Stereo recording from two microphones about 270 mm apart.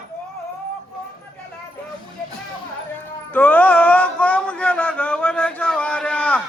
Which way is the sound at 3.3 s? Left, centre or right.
Centre.